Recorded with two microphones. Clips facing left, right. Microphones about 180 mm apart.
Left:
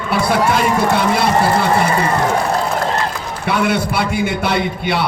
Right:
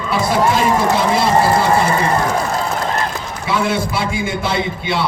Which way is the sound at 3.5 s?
65° left (ahead or behind).